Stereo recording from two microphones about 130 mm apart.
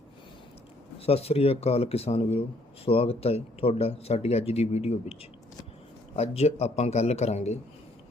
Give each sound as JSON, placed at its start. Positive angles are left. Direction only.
{"t": 0.9, "sound": "a man's voice", "side_deg": 50}
{"t": 6.1, "sound": "a man's voice", "side_deg": 55}